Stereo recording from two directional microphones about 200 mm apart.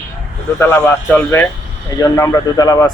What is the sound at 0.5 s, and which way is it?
Speech, 10° left (ahead or behind).